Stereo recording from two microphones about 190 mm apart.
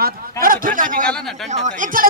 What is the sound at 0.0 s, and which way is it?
A man's voice, 45° right (ahead or behind).